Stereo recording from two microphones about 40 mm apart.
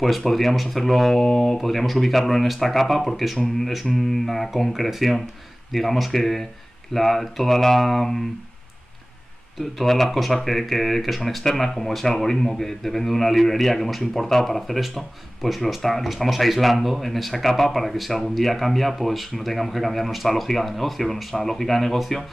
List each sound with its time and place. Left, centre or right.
0.0 s a man's voice: centre
9.6 s a man's voice: centre